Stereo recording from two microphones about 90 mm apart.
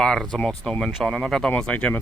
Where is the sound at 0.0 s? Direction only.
10° left (ahead or behind).